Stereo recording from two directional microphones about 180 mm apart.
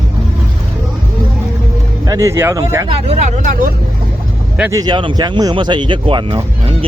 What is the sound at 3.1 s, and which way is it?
Speech, 40° right (ahead or behind).